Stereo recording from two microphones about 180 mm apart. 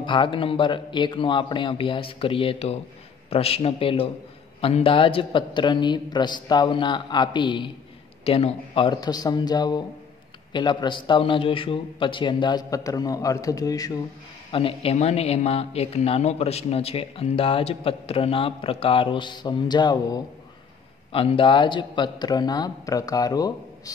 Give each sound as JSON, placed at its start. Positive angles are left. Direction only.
{"t": 0.0, "sound": "a man's voice", "side_deg": 25}
{"t": 14.5, "sound": "a man's voice", "side_deg": 30}